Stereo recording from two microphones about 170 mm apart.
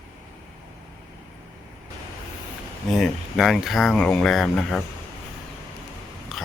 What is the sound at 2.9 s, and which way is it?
Speech, centre (ahead or behind).